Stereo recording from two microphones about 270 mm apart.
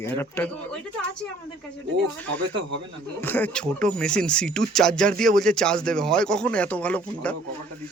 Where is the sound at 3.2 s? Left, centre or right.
Centre.